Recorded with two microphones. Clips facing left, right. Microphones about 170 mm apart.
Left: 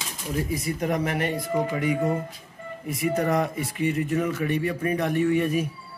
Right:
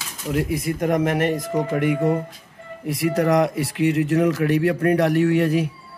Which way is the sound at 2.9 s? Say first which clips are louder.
Right 5 dB; 75° right (ahead or behind).